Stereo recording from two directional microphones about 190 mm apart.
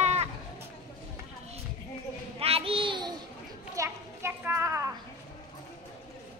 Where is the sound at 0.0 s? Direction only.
35° right (ahead or behind).